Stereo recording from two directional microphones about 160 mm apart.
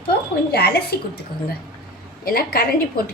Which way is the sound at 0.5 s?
75° left (ahead or behind).